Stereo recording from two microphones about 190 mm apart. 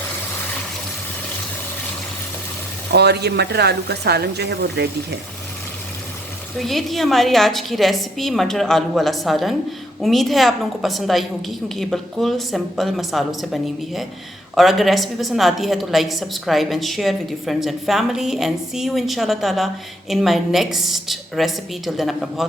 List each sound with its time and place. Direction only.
2.9 s speech: 60° right (ahead or behind)
6.6 s a woman's voice: centre (ahead or behind)